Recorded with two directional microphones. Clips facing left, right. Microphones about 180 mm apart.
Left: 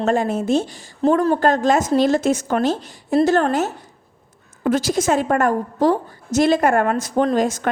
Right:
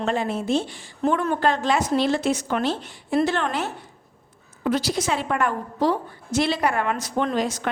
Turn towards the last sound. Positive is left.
turn(degrees=45)  # may be behind; listen again after turning